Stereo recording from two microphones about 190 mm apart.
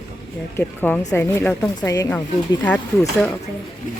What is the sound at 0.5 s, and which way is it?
Speech, 10° left (ahead or behind).